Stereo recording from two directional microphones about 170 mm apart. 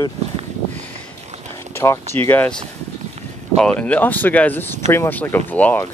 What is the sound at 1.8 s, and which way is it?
Speech, 15° left (ahead or behind).